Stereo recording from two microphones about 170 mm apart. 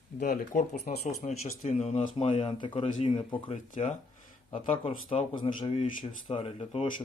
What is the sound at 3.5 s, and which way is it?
Speech, 45° left (ahead or behind).